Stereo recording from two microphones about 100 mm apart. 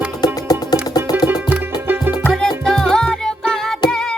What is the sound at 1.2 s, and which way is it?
Music, 20° right (ahead or behind).